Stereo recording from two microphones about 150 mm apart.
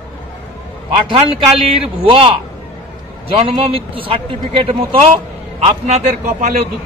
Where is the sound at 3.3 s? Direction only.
40° right (ahead or behind).